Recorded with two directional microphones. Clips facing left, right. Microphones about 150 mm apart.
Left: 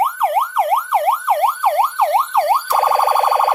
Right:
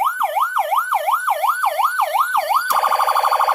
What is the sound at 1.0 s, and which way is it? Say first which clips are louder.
Emergency vehicle: left 5 dB; 30° left (ahead or behind).